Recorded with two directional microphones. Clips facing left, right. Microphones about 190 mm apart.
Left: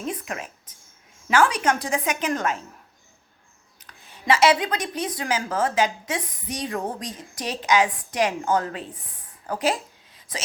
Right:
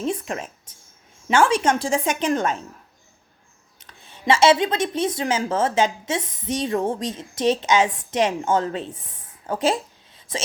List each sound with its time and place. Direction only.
0.0 s a woman's voice: 30° right (ahead or behind)
3.8 s a woman's voice: 25° right (ahead or behind)
9.5 s a sound: 25° right (ahead or behind)